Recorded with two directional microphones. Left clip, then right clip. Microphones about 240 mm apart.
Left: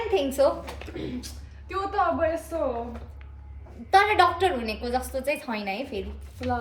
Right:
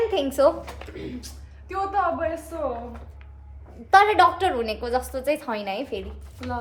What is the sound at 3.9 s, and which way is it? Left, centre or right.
A woman's voice, centre.